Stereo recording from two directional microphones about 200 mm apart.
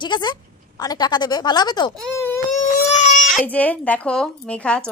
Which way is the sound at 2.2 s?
15° left (ahead or behind).